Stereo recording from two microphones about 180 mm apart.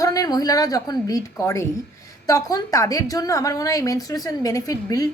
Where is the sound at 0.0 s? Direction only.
20° left (ahead or behind).